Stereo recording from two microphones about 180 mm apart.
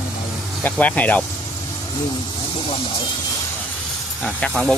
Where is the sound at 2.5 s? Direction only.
30° left (ahead or behind).